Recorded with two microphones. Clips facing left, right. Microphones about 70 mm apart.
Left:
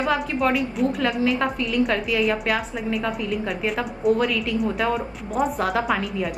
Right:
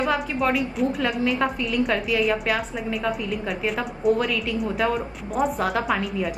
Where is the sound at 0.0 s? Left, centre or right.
Centre.